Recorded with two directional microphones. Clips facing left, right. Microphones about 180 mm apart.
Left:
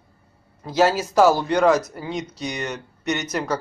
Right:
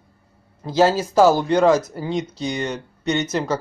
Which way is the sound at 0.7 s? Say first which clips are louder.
Right 2 dB; 30° right (ahead or behind).